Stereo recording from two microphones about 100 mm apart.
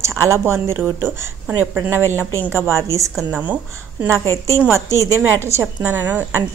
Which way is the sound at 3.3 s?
15° right (ahead or behind).